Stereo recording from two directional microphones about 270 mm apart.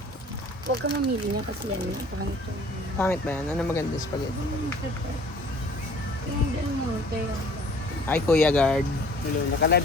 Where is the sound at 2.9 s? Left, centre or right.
Centre.